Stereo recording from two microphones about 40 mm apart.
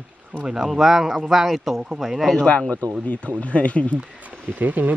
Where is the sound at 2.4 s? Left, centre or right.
Left.